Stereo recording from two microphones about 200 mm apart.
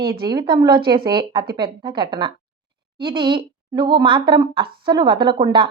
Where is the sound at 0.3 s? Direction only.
20° right (ahead or behind).